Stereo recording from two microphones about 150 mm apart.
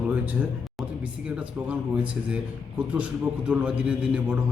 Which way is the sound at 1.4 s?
10° right (ahead or behind).